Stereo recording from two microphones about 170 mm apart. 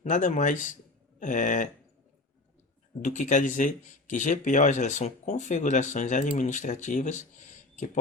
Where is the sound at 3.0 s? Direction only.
45° left (ahead or behind).